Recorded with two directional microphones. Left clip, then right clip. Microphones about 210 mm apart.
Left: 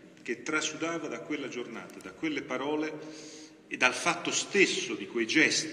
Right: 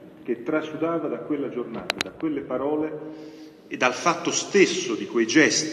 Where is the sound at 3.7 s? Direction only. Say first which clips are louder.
Right 5 dB; 40° right (ahead or behind).